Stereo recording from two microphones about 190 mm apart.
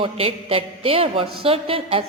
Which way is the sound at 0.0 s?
30° right (ahead or behind).